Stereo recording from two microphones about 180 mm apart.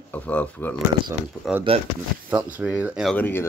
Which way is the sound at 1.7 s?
30° right (ahead or behind).